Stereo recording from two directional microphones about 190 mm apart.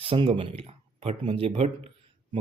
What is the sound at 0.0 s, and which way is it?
Speech, 30° right (ahead or behind).